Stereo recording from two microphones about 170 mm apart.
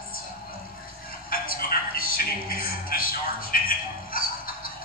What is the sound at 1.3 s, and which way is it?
A man's voice, 60° left (ahead or behind).